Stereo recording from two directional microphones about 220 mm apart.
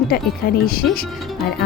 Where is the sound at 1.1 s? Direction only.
Centre (ahead or behind).